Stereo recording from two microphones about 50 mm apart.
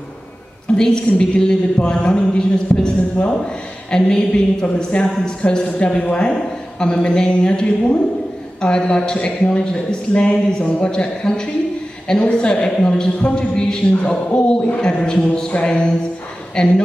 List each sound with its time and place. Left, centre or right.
0.7 s a woman's voice: centre